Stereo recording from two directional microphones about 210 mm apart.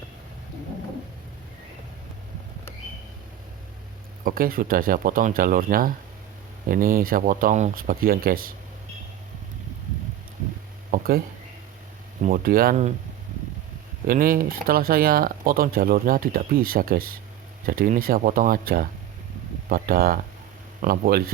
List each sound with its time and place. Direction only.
4.2 s speech: 40° right (ahead or behind)
10.9 s a sound: 45° right (ahead or behind)
12.2 s speech: 45° right (ahead or behind)
14.1 s speech: 45° right (ahead or behind)